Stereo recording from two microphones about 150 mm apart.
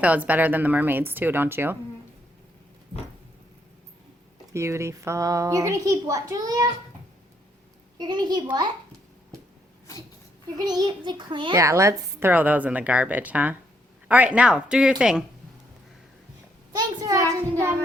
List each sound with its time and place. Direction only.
0.0 s a woman's voice: 10° right (ahead or behind)
4.5 s a woman's voice: 20° right (ahead or behind)
7.9 s a woman's voice: 30° right (ahead or behind)
10.7 s a child's voice: 30° right (ahead or behind)
11.5 s a woman's voice: 20° right (ahead or behind)
16.7 s a woman's voice: 25° right (ahead or behind)